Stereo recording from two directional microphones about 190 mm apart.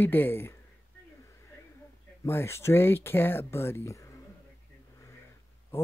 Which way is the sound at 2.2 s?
15° left (ahead or behind).